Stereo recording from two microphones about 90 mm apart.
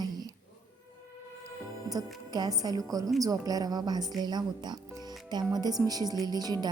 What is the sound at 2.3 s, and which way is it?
Music, 45° right (ahead or behind).